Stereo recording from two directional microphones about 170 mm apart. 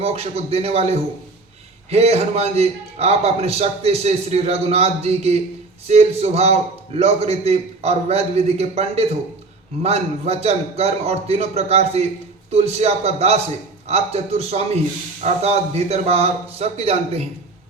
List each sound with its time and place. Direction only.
0.0 s a man's voice: 35° right (ahead or behind)